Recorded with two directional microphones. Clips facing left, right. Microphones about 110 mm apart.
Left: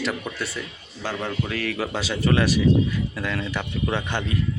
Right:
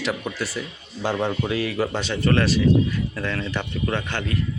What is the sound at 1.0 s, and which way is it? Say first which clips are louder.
Speech: right 4 dB; 20° right (ahead or behind).